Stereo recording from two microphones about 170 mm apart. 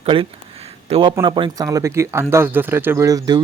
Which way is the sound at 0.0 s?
30° right (ahead or behind).